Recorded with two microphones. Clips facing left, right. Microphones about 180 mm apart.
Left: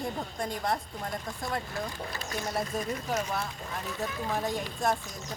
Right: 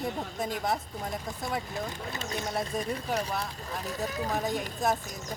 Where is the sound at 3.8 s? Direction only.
40° right (ahead or behind).